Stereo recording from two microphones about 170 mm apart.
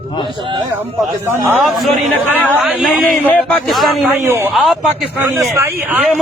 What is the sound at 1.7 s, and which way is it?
A man's voice, centre (ahead or behind).